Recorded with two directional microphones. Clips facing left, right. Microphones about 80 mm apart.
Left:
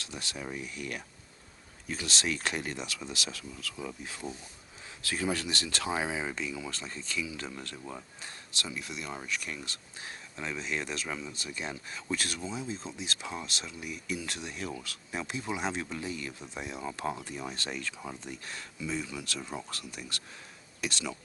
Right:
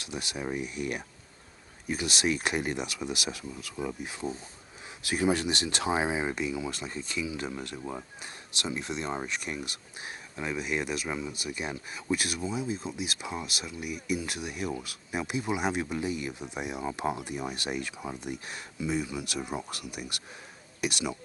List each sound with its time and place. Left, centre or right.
0.0 s speech: centre